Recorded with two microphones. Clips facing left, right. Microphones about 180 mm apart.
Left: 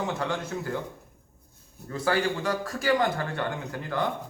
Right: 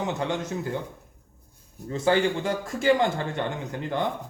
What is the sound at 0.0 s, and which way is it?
Speech, 20° right (ahead or behind).